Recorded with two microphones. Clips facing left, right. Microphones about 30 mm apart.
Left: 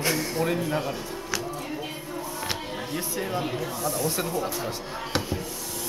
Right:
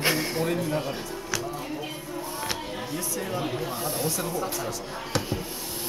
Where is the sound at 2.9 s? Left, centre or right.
Left.